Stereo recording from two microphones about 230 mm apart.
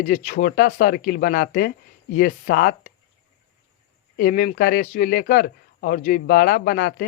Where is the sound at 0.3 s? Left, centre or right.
Left.